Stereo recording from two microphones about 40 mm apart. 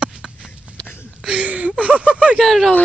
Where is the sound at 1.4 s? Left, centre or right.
Right.